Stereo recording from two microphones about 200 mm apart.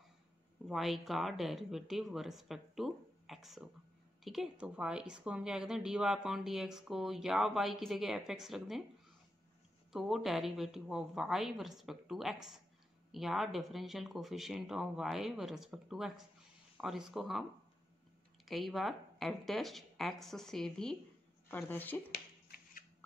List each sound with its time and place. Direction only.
0.7 s a woman's voice: centre (ahead or behind)
9.9 s a woman's voice: centre (ahead or behind)
22.1 s a sound: 50° left (ahead or behind)